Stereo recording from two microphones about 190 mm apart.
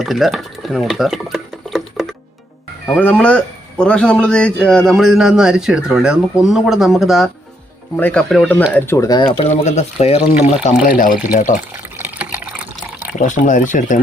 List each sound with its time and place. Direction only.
0.0 s a man's voice: centre (ahead or behind)
8.7 s speech: 15° left (ahead or behind)
9.6 s speech: 35° left (ahead or behind)
11.9 s water: 10° right (ahead or behind)
13.1 s speech: 40° left (ahead or behind)